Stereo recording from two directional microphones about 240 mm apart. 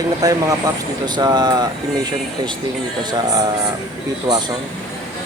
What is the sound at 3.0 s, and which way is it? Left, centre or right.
Speech, centre.